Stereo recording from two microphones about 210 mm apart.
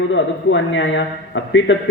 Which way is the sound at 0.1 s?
60° left (ahead or behind).